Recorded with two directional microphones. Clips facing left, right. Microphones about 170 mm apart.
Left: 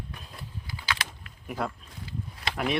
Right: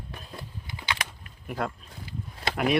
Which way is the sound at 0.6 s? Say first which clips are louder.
Even; 20° right (ahead or behind).